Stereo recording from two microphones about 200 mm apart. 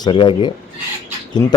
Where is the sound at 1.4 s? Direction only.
15° left (ahead or behind).